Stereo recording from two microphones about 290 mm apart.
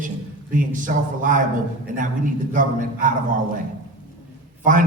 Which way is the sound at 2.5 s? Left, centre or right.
Right.